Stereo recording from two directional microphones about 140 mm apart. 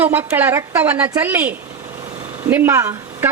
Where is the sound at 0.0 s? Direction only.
10° right (ahead or behind).